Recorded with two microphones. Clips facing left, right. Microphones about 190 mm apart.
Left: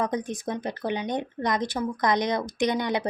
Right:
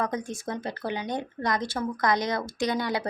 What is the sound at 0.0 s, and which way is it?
Speech, 20° left (ahead or behind).